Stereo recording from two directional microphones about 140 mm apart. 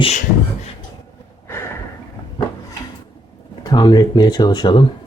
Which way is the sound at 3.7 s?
30° left (ahead or behind).